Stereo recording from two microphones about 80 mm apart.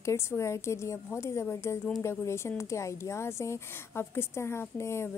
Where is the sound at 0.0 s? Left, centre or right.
Left.